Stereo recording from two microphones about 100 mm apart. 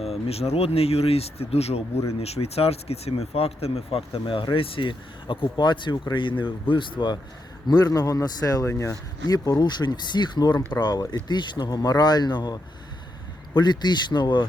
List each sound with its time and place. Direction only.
0.0 s speech: 90° left; by 7.2 s 50° left (ahead or behind)
7.7 s speech: 40° left (ahead or behind)
9.3 s speech: 40° left (ahead or behind)